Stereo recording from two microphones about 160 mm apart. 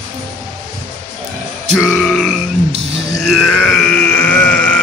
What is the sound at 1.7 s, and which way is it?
Grunt, centre (ahead or behind).